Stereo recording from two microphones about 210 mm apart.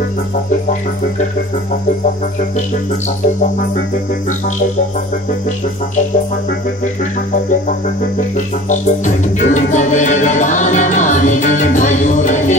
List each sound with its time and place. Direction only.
8.6 s music: 35° left (ahead or behind)